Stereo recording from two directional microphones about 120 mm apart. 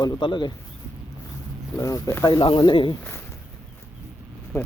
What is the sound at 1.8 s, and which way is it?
Speech, 25° left (ahead or behind).